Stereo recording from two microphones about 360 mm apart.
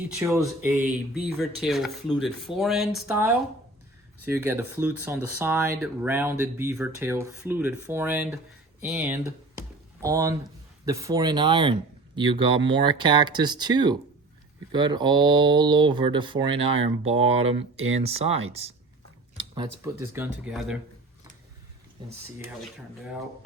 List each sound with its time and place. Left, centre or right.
0.1 s speech: centre
8.8 s typing: centre
10.8 s speech: centre
22.0 s speech: centre